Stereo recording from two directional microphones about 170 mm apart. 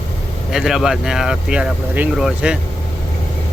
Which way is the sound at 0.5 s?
Centre (ahead or behind).